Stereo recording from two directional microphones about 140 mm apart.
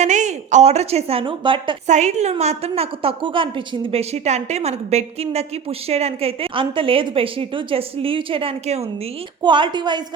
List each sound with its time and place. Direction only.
0.0 s a woman's voice: 60° right (ahead or behind); by 1.7 s 35° right (ahead or behind)
1.9 s a woman's voice: 55° right (ahead or behind); by 3.5 s 40° right (ahead or behind)
3.9 s a woman's voice: 50° right (ahead or behind)
9.4 s a woman's voice: 35° right (ahead or behind)